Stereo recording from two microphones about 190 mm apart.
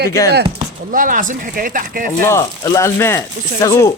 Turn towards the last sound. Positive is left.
turn(degrees=15)  # may be behind; listen again after turning